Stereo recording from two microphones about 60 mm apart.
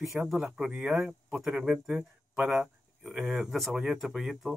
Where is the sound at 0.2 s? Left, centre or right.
Centre.